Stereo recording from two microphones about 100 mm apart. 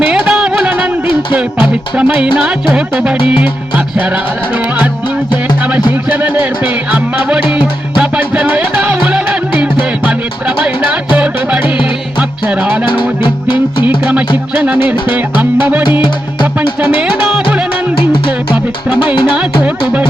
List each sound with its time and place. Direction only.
0.1 s music: 10° right (ahead or behind)
5.9 s music: 15° right (ahead or behind)
12.8 s music: 55° left (ahead or behind)
14.0 s music: 10° right (ahead or behind)
16.0 s music: 55° left (ahead or behind)
17.9 s music: 60° left (ahead or behind)